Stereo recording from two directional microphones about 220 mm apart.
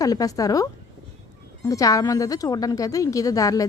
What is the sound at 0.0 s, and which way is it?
A woman's voice, 15° left (ahead or behind).